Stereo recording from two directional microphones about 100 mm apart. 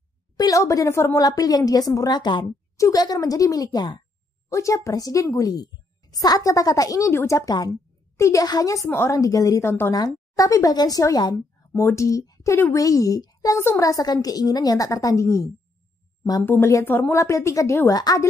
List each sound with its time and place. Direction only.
0.4 s a woman's voice: 35° left (ahead or behind)
1.2 s a woman's voice: 40° left (ahead or behind)
8.8 s a woman's voice: 25° left (ahead or behind)
9.9 s a woman's voice: 40° left (ahead or behind)
16.4 s a woman's voice: 20° left (ahead or behind); by 18.2 s 40° left (ahead or behind)